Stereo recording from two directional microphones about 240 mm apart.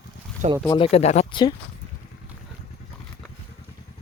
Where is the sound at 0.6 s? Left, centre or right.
Centre.